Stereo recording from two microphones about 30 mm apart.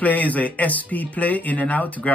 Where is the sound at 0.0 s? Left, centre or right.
Left.